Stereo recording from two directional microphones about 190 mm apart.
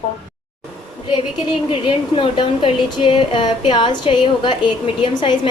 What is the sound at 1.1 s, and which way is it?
A woman's voice, 25° left (ahead or behind).